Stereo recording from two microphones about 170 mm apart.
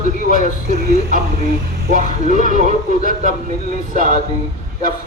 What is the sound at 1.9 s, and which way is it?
Speech, 45° right (ahead or behind).